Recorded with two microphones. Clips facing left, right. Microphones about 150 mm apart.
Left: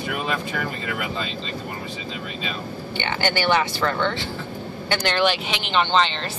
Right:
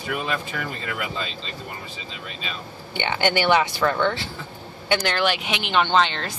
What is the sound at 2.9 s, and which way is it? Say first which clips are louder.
Speech: right 2 dB; 15° right (ahead or behind).